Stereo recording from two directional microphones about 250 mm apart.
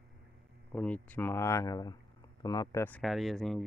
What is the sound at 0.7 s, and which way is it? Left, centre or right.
Speech, centre.